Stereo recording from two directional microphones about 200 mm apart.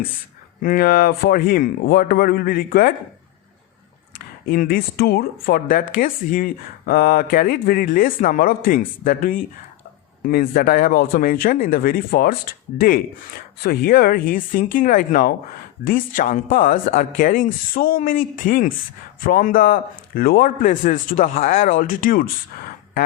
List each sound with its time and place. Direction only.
0.6 s speech: 45° left (ahead or behind)
4.4 s speech: 45° left (ahead or behind)